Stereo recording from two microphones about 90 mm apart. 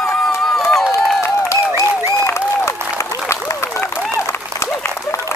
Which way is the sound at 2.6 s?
30° left (ahead or behind).